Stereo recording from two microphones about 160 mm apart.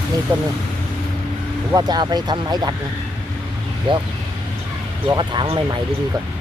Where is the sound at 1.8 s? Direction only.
25° right (ahead or behind).